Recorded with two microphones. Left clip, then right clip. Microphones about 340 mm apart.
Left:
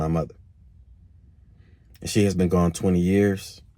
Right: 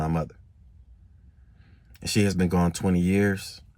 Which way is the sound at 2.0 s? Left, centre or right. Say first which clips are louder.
Left 3 dB; centre.